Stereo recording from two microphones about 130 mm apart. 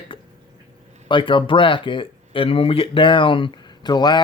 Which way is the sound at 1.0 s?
40° left (ahead or behind).